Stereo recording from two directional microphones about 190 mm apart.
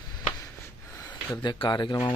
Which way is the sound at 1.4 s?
25° left (ahead or behind).